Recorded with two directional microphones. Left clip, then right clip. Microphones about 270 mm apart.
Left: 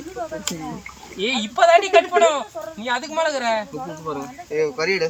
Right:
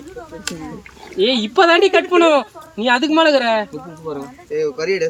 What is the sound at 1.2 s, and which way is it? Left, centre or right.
Speech, right.